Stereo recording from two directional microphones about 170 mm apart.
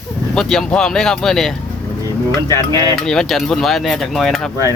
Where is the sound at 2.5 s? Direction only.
25° right (ahead or behind).